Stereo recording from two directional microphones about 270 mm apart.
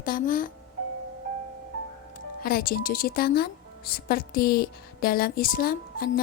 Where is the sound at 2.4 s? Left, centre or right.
Left.